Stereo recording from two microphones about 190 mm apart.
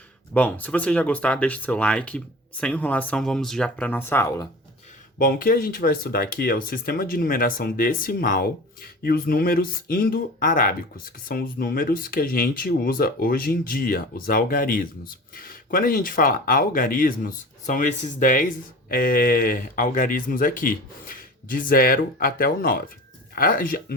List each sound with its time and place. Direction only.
0.3 s speech: 10° left (ahead or behind)
5.1 s speech: 50° left (ahead or behind)